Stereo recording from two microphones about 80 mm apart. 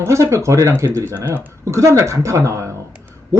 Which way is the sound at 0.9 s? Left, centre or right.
Right.